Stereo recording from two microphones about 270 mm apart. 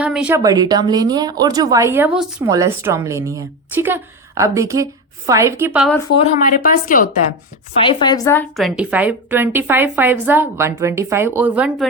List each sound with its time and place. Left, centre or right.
0.0 s speech: centre
6.0 s speech: left
7.8 s speech: centre